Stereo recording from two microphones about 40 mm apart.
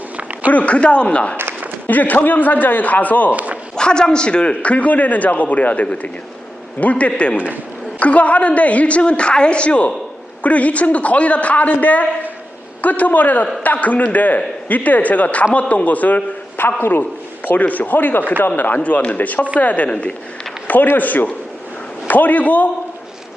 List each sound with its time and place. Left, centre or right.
0.2 s a sound: right
0.5 s a man's voice: left
1.9 s a man's voice: left
3.3 s a sound: right
3.8 s a man's voice: left
7.3 s a man's voice: right
7.9 s a man's voice: left
16.6 s a man's voice: left
17.4 s a man's voice: left
18.8 s a man's voice: left
19.9 s a man's voice: left
20.9 s a man's voice: left